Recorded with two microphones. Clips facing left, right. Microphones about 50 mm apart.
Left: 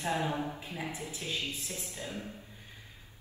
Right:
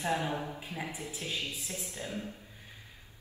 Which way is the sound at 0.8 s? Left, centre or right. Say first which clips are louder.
Left 2 dB; left.